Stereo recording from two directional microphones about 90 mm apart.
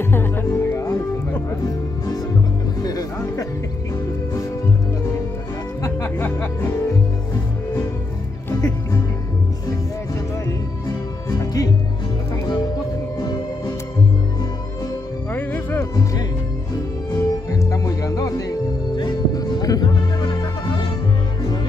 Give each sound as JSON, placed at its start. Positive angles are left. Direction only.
{"t": 0.0, "sound": "music", "side_deg": 25}
{"t": 2.8, "sound": "music", "side_deg": 45}
{"t": 5.8, "sound": "music", "side_deg": 35}
{"t": 6.0, "sound": "music", "side_deg": 25}
{"t": 8.5, "sound": "music", "side_deg": 40}
{"t": 11.2, "sound": "music", "side_deg": 40}
{"t": 15.3, "sound": "music", "side_deg": 20}
{"t": 15.8, "sound": "music", "side_deg": 40}
{"t": 18.9, "sound": "music", "side_deg": 50}